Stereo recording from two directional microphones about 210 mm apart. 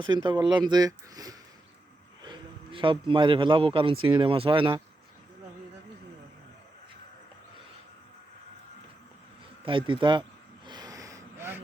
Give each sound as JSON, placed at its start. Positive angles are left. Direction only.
{"t": 0.0, "sound": "a man's voice", "side_deg": -20}
{"t": 9.6, "sound": "speech", "side_deg": -25}
{"t": 10.7, "sound": "gasp", "side_deg": -20}